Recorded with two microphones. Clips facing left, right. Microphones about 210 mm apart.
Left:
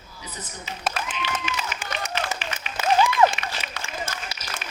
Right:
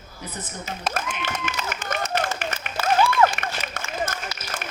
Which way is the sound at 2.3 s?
50° right (ahead or behind).